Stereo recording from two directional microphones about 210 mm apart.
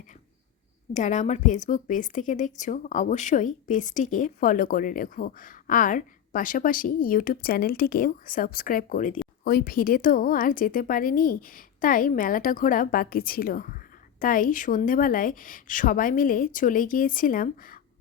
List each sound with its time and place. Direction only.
0.9 s a woman's voice: 35° left (ahead or behind)